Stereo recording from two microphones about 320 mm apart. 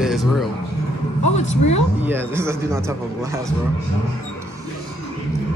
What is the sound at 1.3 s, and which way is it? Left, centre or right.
Speech, left.